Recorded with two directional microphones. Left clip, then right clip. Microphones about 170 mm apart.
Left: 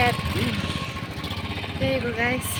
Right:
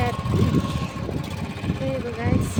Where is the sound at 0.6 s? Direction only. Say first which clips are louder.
Even; 40° right (ahead or behind).